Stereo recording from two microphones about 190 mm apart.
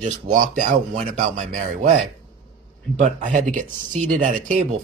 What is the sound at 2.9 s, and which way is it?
Speech, 45° right (ahead or behind).